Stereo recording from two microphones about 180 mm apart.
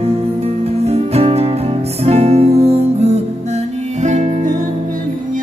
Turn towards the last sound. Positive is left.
turn(degrees=-40)  # may be behind; listen again after turning